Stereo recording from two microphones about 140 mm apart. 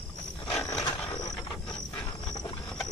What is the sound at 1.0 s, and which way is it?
Mechanisms, 25° left (ahead or behind).